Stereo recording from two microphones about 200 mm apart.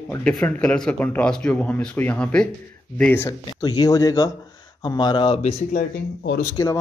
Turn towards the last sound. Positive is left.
turn(degrees=15)  # may be behind; listen again after turning